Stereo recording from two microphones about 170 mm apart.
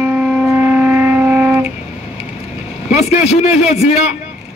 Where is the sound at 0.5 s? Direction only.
10° right (ahead or behind).